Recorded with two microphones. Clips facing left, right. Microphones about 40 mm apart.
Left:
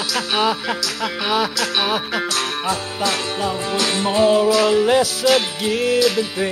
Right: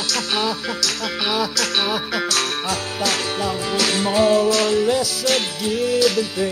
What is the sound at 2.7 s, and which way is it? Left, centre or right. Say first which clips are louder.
Music: left 1 dB; right.